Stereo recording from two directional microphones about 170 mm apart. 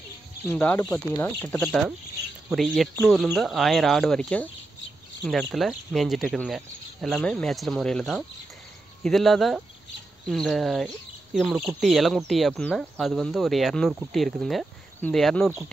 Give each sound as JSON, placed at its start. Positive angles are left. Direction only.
{"t": 0.5, "sound": "speech", "side_deg": 10}
{"t": 0.7, "sound": "speech", "side_deg": 20}